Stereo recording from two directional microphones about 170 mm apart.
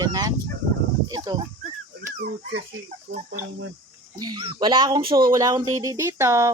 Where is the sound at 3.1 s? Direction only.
90° right.